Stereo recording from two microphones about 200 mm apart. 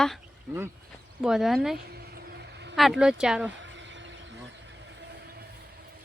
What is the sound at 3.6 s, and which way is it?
Vehicle, 65° right (ahead or behind).